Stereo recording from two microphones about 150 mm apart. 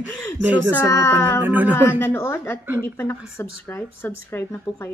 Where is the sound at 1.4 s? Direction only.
10° right (ahead or behind).